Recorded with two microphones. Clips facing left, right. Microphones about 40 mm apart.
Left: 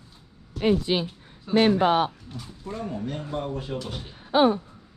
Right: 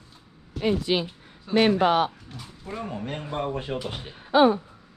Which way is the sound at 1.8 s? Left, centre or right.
Right.